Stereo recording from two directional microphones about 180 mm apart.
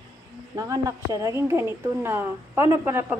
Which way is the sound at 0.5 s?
20° right (ahead or behind).